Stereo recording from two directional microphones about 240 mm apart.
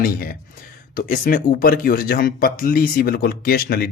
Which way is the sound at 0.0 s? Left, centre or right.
Left.